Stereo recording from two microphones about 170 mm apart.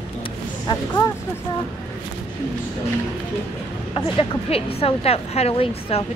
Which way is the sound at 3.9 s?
30° left (ahead or behind).